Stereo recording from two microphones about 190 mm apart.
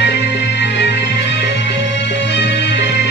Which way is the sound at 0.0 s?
65° left (ahead or behind).